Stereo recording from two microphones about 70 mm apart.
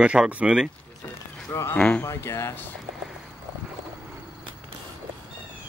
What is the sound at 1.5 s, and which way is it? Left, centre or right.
Speech, left.